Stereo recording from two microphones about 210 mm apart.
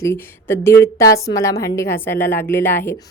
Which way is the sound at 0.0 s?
10° left (ahead or behind).